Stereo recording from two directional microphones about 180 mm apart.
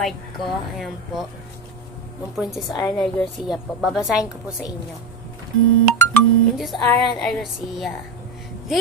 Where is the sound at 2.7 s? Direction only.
20° left (ahead or behind).